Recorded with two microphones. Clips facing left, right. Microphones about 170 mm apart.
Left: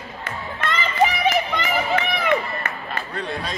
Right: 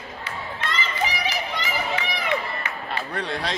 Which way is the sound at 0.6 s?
55° left (ahead or behind).